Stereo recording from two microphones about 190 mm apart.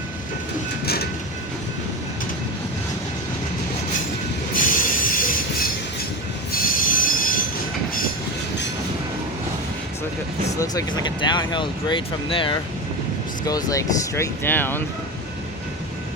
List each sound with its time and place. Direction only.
4.5 s train: 45° left (ahead or behind)
6.5 s train wheels squealing: 45° left (ahead or behind)
10.6 s speech: 20° left (ahead or behind)